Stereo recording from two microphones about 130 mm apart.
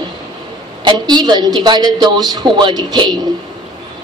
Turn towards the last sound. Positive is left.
turn(degrees=-35)  # may be behind; listen again after turning